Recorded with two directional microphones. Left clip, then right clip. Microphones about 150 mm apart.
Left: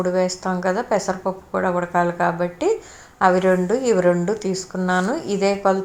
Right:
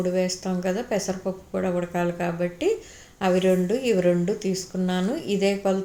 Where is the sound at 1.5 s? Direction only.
40° left (ahead or behind).